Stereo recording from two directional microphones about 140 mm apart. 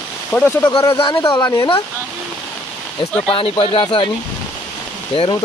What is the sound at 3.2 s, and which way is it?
Speech, 40° left (ahead or behind).